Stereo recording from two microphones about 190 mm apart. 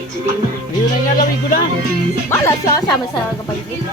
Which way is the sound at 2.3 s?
15° left (ahead or behind).